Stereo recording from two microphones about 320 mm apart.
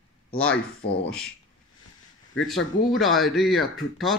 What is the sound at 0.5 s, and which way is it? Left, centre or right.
Speech, left.